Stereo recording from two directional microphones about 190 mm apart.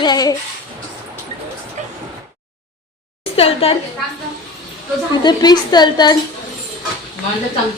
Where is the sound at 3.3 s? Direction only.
30° left (ahead or behind).